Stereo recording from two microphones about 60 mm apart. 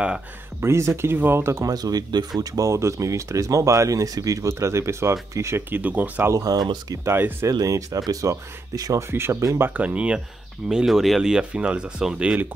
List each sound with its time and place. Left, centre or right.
0.6 s speech: right
1.1 s speech: right
1.6 s speech: right
2.5 s speech: right
5.7 s speech: right
6.3 s speech: right
7.2 s speech: right
7.4 s speech: right
8.1 s speech: right
9.1 s speech: right
9.8 s speech: right
10.7 s speech: centre